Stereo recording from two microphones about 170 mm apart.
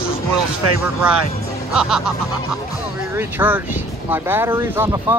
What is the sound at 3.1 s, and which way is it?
Speech, 10° right (ahead or behind).